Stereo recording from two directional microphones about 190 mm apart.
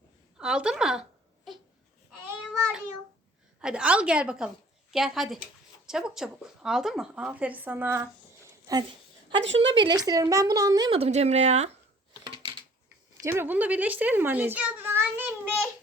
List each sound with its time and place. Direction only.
0.3 s speech: 5° right (ahead or behind)
3.6 s a woman's voice: 5° right (ahead or behind); by 9.0 s 20° right (ahead or behind)
9.3 s a woman's voice: 70° right (ahead or behind)
9.6 s speech: 25° right (ahead or behind)
12.2 s a sound: 25° right (ahead or behind)
13.2 s a child's voice: 10° right (ahead or behind)